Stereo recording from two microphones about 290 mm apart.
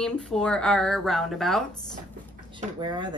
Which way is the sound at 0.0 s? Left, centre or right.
Centre.